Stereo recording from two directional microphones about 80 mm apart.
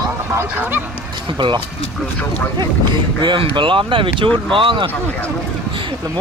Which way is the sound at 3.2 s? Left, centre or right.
Right.